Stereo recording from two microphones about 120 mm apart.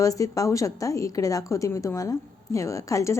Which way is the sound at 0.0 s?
30° left (ahead or behind).